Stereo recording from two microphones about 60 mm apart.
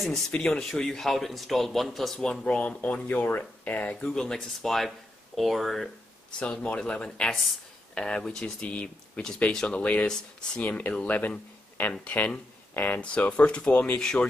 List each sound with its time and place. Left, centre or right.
0.3 s speech: centre
2.6 s speech: left
4.0 s speech: centre
6.4 s speech: centre
8.5 s speech: left
10.6 s speech: left
12.7 s speech: left
13.0 s speech: centre
13.9 s speech: centre